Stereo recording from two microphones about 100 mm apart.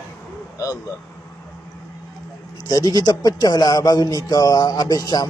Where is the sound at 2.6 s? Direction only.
40° left (ahead or behind).